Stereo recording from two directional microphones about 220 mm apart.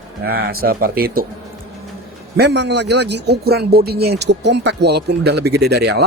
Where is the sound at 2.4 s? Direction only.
50° right (ahead or behind).